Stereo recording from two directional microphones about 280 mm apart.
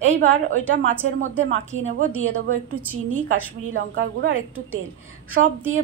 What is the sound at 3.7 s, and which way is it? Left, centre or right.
Speech, right.